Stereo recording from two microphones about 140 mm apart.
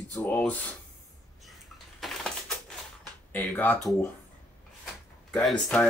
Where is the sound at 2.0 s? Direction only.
Centre (ahead or behind).